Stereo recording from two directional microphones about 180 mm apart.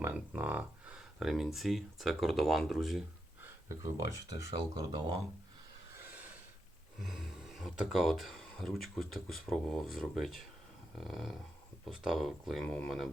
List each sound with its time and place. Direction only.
0.0 s speech: 10° right (ahead or behind)
3.4 s speech: 15° right (ahead or behind)
7.0 s speech: centre (ahead or behind)